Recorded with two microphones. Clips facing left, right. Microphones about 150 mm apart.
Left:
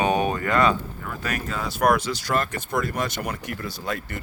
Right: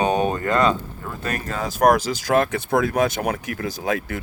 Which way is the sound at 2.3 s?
65° right (ahead or behind).